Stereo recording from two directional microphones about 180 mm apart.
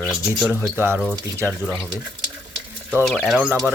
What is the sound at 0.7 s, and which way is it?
Speech, 15° right (ahead or behind).